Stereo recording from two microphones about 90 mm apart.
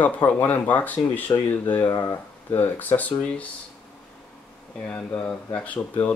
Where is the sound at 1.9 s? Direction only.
30° left (ahead or behind).